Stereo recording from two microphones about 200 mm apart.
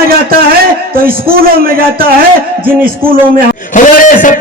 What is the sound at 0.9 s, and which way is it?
A man's voice, 45° right (ahead or behind).